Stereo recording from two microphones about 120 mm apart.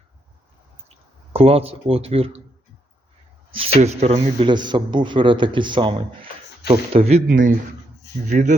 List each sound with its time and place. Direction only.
1.3 s speech: 55° right (ahead or behind)
3.5 s speech: 60° right (ahead or behind)
4.4 s speech: 40° right (ahead or behind)
6.7 s speech: 55° right (ahead or behind); by 7.5 s 75° right (ahead or behind)
8.3 s speech: 90° right